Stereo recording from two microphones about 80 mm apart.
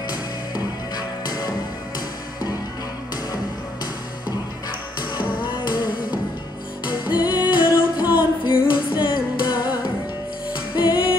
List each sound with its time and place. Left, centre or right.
0.9 s music: left
5.1 s music: left
7.2 s music: left
8.2 s music: left
10.8 s music: left